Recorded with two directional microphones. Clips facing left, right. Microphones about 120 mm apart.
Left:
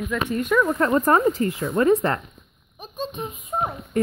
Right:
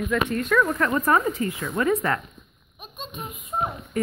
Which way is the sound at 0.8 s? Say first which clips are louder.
Left 3 dB; 30° left (ahead or behind).